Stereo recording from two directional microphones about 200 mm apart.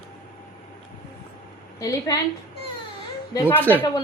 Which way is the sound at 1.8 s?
15° left (ahead or behind).